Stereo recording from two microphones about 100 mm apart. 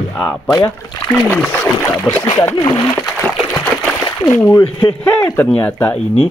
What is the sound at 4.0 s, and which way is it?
Speech, 35° left (ahead or behind).